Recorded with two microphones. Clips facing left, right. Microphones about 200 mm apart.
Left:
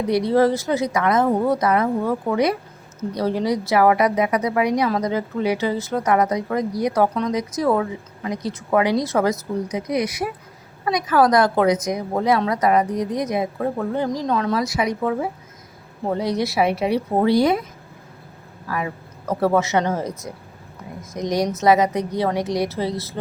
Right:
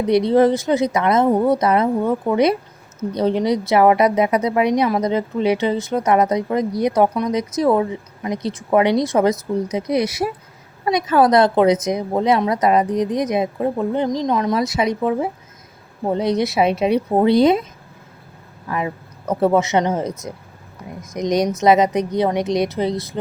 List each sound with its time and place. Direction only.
0.1 s a woman's voice: 20° right (ahead or behind)
18.7 s a woman's voice: 20° right (ahead or behind)